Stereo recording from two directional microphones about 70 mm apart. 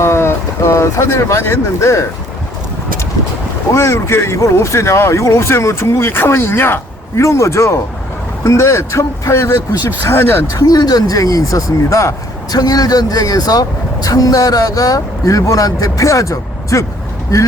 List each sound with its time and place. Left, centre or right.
0.0 s speech: left
3.8 s speech: left
7.2 s speech: left
10.0 s speech: left
10.5 s speech: left
12.5 s speech: left